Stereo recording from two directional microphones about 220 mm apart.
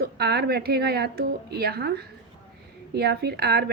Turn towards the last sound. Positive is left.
turn(degrees=-45)  # may be behind; listen again after turning